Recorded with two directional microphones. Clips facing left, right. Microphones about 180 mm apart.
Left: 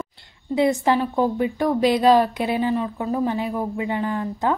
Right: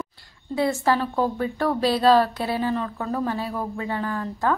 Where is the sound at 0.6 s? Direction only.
20° left (ahead or behind).